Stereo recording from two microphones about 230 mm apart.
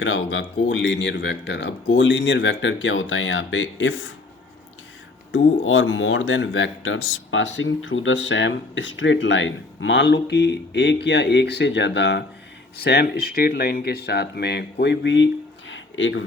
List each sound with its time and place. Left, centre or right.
0.0 s speech: left
5.3 s speech: left
15.7 s a sound: left